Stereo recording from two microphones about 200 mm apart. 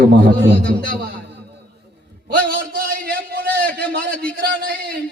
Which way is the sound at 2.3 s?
50° right (ahead or behind).